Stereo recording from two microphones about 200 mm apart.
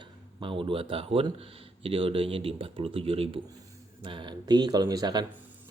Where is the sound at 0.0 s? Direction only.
25° right (ahead or behind).